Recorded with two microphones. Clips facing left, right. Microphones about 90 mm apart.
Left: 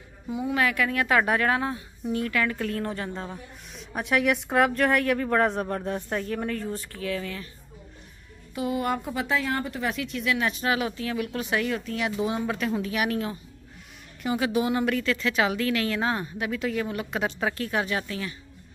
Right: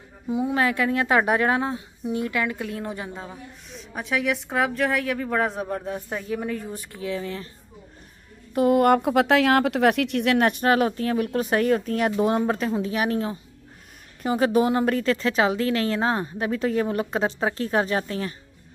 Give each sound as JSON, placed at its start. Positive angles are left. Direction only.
{"t": 0.3, "sound": "a woman's voice", "side_deg": -25}
{"t": 8.5, "sound": "a woman's voice", "side_deg": -55}